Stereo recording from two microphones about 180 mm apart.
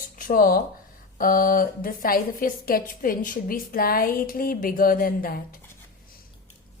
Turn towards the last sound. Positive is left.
turn(degrees=55)  # may be behind; listen again after turning